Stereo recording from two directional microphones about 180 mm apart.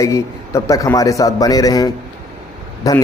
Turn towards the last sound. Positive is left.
turn(degrees=20)  # may be behind; listen again after turning